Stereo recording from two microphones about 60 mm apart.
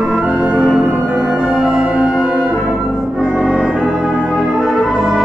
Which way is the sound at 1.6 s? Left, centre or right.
Centre.